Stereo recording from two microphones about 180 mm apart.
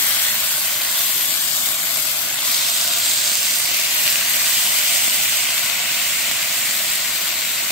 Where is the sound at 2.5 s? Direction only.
Centre (ahead or behind).